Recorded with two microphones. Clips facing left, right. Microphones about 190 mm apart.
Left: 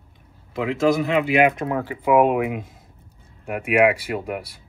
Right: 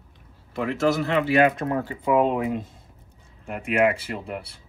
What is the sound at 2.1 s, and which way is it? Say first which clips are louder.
Speech: left 4 dB; 75° left (ahead or behind).